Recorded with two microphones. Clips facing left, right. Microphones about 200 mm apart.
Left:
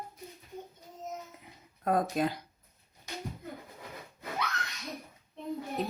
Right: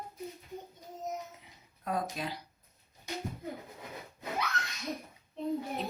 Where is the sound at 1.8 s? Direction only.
50° left (ahead or behind).